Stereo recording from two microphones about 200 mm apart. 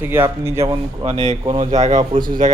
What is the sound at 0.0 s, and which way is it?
Speech, 10° right (ahead or behind).